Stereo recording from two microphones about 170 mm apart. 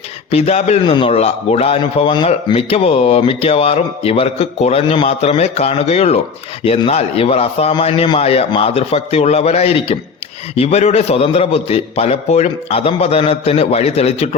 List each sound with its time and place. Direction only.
0.3 s a man's voice: 35° left (ahead or behind)